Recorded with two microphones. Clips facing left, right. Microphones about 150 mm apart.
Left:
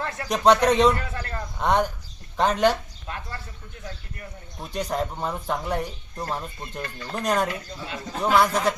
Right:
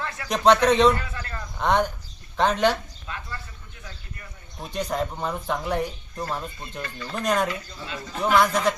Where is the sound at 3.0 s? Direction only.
45° left (ahead or behind).